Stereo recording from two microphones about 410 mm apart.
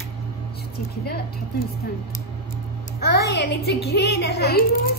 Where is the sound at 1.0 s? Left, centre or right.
Left.